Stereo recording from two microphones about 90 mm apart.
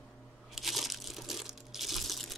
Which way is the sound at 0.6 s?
Centre (ahead or behind).